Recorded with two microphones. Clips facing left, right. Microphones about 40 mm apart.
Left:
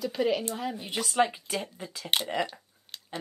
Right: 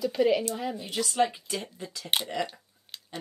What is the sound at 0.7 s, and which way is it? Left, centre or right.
Speech, left.